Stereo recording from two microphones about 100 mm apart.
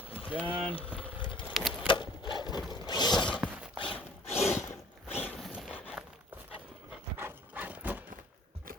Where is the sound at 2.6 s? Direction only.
45° left (ahead or behind).